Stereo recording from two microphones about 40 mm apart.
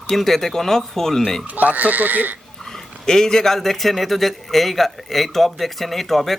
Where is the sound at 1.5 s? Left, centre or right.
Right.